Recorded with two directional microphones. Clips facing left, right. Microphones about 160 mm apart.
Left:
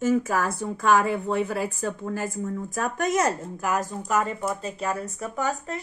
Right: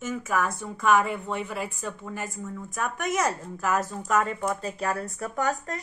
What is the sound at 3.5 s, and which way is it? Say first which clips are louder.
A woman's voice: even; 15° left (ahead or behind).